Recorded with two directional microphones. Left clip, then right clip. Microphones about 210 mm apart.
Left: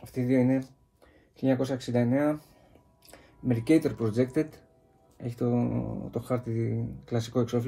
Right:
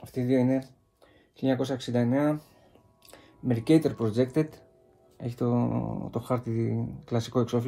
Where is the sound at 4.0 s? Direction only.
20° right (ahead or behind).